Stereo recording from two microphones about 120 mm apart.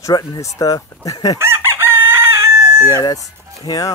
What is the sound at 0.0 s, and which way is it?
Speech, 30° left (ahead or behind).